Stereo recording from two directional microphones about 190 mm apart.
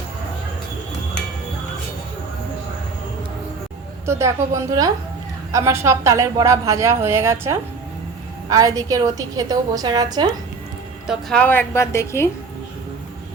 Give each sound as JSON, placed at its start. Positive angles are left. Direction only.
{"t": 4.0, "sound": "a woman's voice", "side_deg": -15}
{"t": 11.0, "sound": "a woman's voice", "side_deg": 0}